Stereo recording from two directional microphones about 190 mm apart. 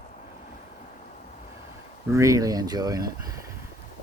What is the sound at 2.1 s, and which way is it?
Speech, 15° right (ahead or behind).